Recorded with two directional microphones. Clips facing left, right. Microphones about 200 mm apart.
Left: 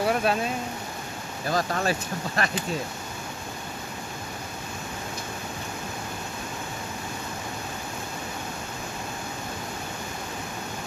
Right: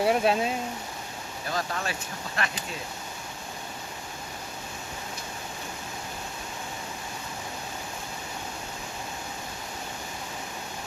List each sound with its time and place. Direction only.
0.0 s speech: 25° right (ahead or behind)
1.5 s speech: 40° left (ahead or behind)